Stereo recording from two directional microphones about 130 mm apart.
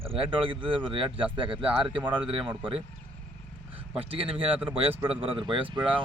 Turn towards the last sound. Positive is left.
turn(degrees=-40)  # may be behind; listen again after turning